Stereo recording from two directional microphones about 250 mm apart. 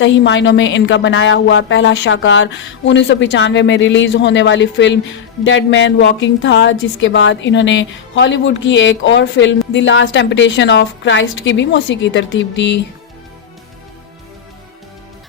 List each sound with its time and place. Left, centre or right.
0.0 s a woman's voice: left